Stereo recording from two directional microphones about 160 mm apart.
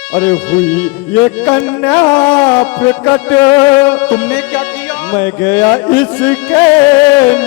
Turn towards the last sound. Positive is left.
turn(degrees=10)  # may be behind; listen again after turning